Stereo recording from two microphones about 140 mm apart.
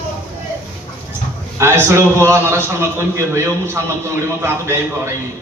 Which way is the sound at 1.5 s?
20° right (ahead or behind).